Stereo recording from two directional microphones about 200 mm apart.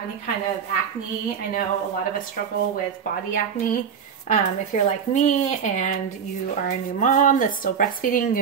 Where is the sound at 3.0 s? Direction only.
45° left (ahead or behind).